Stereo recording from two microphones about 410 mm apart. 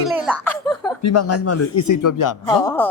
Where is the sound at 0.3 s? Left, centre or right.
Centre.